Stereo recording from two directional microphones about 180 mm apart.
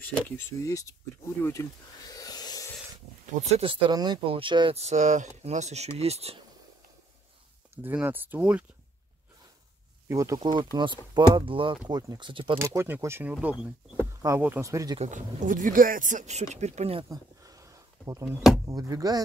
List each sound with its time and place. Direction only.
0.0 s speech: 15° left (ahead or behind)
1.4 s snake: 15° left (ahead or behind)
3.4 s speech: 35° right (ahead or behind)
7.7 s speech: 10° right (ahead or behind)
10.0 s speech: 15° right (ahead or behind)
12.5 s speech: 15° right (ahead or behind)
15.0 s speech: 45° right (ahead or behind)
17.1 s a sound: 20° right (ahead or behind)
18.7 s speech: 20° right (ahead or behind)